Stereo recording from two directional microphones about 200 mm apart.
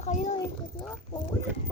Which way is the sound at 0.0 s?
35° left (ahead or behind).